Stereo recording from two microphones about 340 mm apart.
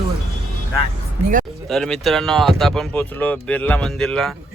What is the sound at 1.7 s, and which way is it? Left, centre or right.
Speech, centre.